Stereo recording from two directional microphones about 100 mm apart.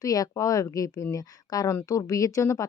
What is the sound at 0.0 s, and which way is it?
Speech, 35° left (ahead or behind).